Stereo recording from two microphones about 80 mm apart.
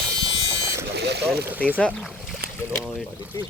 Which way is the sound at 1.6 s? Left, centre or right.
Centre.